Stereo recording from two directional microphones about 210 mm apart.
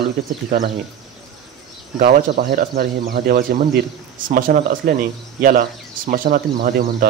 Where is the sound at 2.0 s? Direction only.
50° right (ahead or behind).